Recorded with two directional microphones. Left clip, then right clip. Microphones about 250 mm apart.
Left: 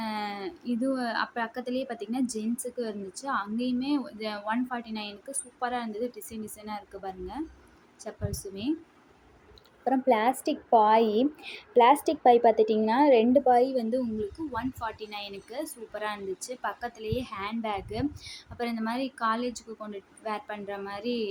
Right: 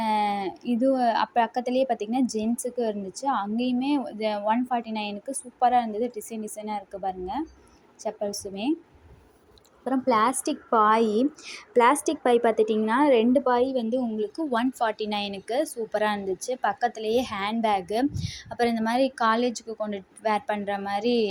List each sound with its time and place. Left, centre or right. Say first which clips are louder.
0.0 s a woman's voice: right 9 dB; centre
9.8 s a woman's voice: right 2 dB; centre
14.5 s a woman's voice: right 8 dB; right